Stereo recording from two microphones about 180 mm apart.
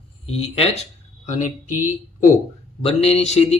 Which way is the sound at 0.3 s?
35° left (ahead or behind).